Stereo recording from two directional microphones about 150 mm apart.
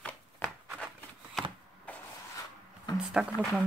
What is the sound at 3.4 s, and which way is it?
Speech, centre (ahead or behind).